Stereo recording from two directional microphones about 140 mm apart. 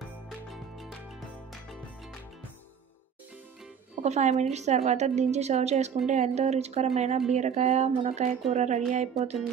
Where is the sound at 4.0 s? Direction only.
55° right (ahead or behind).